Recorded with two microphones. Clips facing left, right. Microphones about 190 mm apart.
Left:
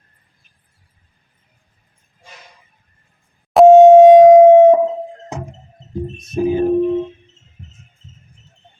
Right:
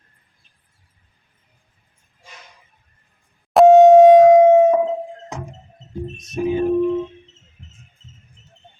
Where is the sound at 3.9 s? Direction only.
20° left (ahead or behind).